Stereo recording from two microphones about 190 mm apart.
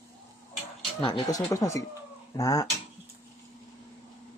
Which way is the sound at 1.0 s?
25° left (ahead or behind).